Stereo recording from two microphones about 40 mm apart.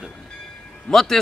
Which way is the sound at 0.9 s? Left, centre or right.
Centre.